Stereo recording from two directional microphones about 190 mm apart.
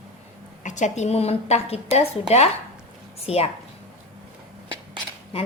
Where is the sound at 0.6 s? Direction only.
40° left (ahead or behind).